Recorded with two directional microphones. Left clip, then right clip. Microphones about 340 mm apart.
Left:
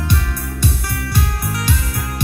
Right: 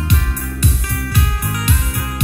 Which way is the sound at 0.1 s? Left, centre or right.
Centre.